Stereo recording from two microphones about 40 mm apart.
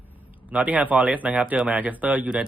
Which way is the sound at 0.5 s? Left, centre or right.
Right.